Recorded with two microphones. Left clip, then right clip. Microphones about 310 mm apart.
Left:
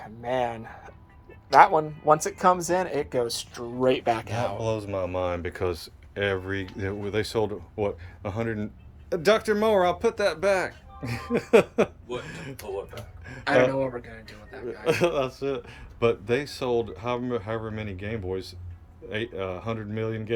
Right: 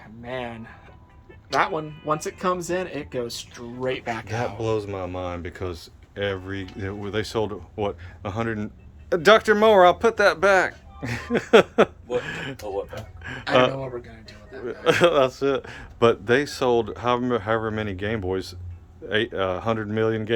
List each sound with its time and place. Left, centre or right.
0.0 s speech: left
4.5 s speech: centre
14.5 s a sound: centre
14.8 s speech: centre